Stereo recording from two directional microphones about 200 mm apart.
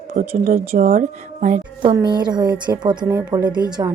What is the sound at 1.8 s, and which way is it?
A woman's voice, 25° right (ahead or behind).